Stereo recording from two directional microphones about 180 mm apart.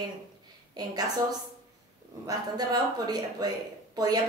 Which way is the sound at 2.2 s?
20° right (ahead or behind).